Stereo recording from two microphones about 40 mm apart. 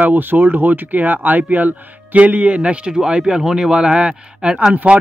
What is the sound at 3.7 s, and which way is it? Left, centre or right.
Speech, right.